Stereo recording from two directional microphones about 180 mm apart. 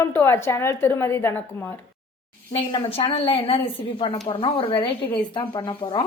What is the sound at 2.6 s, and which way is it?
A woman's voice, 30° left (ahead or behind).